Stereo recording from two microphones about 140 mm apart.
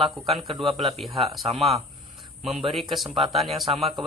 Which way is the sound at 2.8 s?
Centre (ahead or behind).